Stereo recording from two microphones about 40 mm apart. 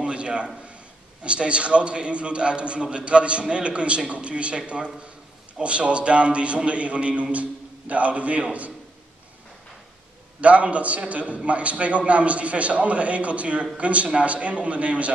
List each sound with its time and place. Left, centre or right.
0.0 s a sound: right
1.2 s a man's voice: right
10.4 s a man's voice: right